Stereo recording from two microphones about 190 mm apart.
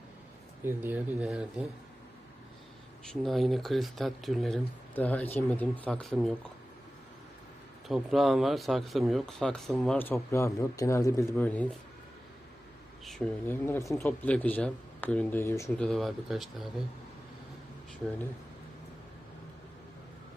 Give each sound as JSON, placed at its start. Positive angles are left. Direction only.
{"t": 0.6, "sound": "speech", "side_deg": -10}
{"t": 3.1, "sound": "speech", "side_deg": 0}
{"t": 7.9, "sound": "speech", "side_deg": 0}
{"t": 13.1, "sound": "speech", "side_deg": 5}
{"t": 15.9, "sound": "speech", "side_deg": 0}